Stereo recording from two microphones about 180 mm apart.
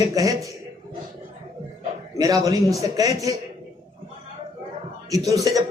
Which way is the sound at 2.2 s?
20° right (ahead or behind).